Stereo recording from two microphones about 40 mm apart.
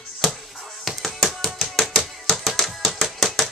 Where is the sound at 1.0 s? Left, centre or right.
Centre.